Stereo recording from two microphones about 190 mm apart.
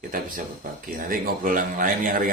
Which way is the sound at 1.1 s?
45° right (ahead or behind).